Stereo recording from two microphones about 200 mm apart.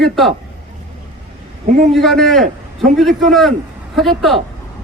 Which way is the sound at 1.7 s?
35° right (ahead or behind).